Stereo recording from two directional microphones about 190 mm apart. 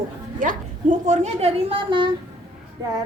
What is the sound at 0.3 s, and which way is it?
A woman's voice, 45° right (ahead or behind).